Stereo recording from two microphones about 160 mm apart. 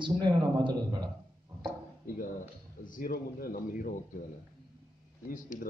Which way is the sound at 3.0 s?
65° left (ahead or behind).